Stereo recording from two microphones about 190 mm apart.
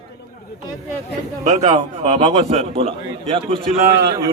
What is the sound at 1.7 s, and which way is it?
A man's voice, 25° right (ahead or behind).